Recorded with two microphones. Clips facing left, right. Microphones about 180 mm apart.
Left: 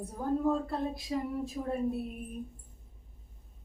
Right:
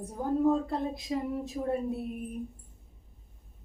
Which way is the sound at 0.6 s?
20° right (ahead or behind).